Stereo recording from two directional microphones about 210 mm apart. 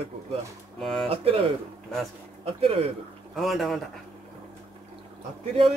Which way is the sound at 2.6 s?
30° right (ahead or behind).